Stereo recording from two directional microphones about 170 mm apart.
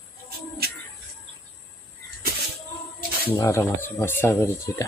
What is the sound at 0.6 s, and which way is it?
Bird, 65° right (ahead or behind).